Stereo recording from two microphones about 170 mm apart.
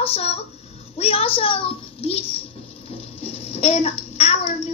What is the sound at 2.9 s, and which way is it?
Bathtub, 35° left (ahead or behind).